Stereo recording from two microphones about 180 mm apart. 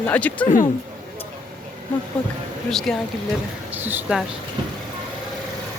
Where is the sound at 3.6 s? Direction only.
10° right (ahead or behind).